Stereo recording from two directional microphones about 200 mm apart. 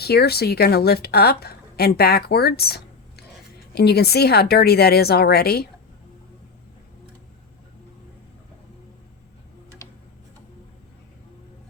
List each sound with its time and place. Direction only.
0.0 s a woman's voice: 55° left (ahead or behind)
9.8 s tick-tock: 15° left (ahead or behind)